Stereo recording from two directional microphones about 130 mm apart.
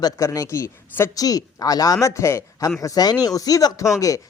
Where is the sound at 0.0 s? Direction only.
25° left (ahead or behind).